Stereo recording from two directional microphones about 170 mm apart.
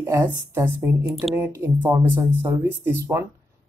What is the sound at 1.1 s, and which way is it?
Speech, centre (ahead or behind).